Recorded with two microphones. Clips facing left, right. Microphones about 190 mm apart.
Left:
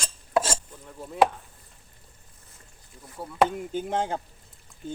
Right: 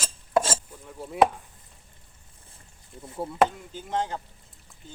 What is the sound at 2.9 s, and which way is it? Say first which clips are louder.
Speech: right 6 dB; 25° right (ahead or behind).